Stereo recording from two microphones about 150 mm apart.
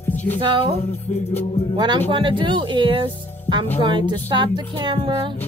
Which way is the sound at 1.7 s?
30° right (ahead or behind).